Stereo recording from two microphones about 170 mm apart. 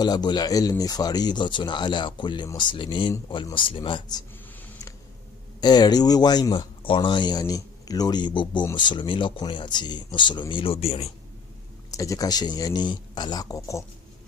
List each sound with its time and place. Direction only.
0.0 s speech: 25° left (ahead or behind)
5.6 s speech: 25° left (ahead or behind)
11.9 s speech: 20° left (ahead or behind)